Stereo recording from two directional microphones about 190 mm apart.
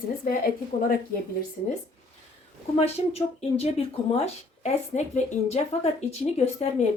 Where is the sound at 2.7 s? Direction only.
35° left (ahead or behind).